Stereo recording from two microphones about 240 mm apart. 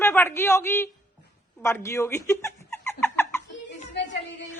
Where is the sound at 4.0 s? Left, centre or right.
Left.